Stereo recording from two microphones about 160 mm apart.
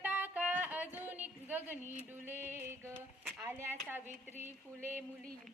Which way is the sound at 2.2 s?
15° right (ahead or behind).